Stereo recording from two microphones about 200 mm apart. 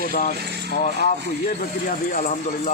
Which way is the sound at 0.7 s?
40° left (ahead or behind).